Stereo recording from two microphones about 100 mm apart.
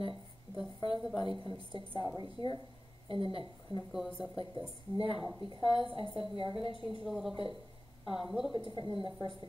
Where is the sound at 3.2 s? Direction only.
65° right (ahead or behind).